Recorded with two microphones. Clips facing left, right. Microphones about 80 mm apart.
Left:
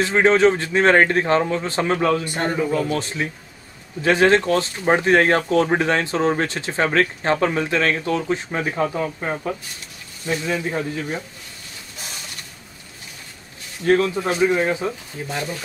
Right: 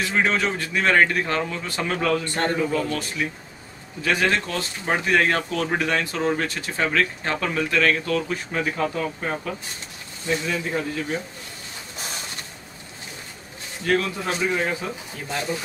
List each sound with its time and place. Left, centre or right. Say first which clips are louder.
0.0 s speech: left 7 dB; left
2.2 s a man's voice: left 1 dB; centre
2.8 s speech: left 3 dB; left
13.8 s speech: left 5 dB; left